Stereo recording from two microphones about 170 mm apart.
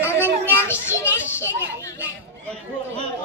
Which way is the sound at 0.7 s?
15° left (ahead or behind).